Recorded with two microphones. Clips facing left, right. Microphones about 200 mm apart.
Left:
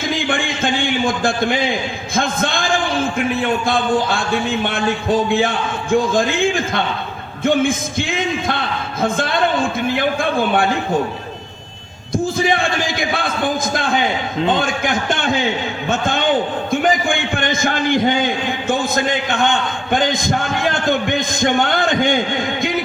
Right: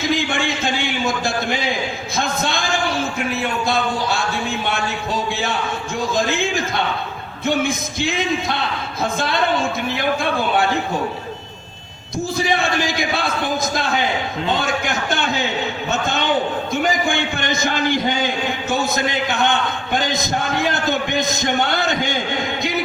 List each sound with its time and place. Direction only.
0.0 s a sound: 50° left (ahead or behind)
3.7 s a man's voice: 50° left (ahead or behind)
12.1 s a man's voice: 50° left (ahead or behind)